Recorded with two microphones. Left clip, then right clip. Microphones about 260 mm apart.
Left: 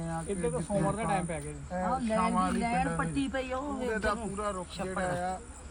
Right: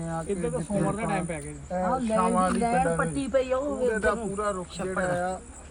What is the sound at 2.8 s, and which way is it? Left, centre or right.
Speech, centre.